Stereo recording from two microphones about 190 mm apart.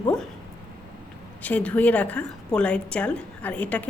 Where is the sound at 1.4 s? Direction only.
10° left (ahead or behind).